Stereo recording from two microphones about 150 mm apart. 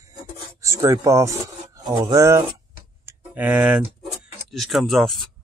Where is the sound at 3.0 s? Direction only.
10° right (ahead or behind).